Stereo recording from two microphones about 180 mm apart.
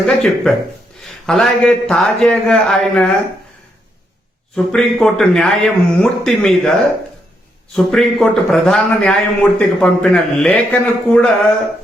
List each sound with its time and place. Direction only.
0.0 s a man's voice: centre (ahead or behind)
4.5 s a man's voice: centre (ahead or behind)
7.8 s a man's voice: centre (ahead or behind)